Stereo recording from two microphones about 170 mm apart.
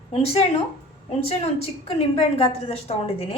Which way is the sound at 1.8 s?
35° left (ahead or behind).